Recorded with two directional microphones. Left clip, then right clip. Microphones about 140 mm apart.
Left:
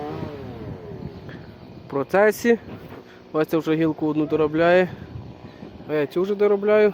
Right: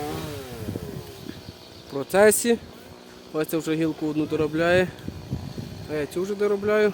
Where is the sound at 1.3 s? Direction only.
5° right (ahead or behind).